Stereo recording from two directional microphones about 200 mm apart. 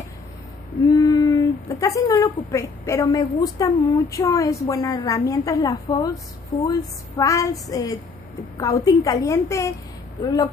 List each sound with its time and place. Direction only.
0.8 s a woman's voice: 15° left (ahead or behind)